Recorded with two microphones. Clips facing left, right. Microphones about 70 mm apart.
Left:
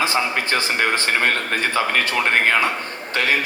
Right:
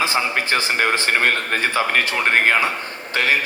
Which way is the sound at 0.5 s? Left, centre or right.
Centre.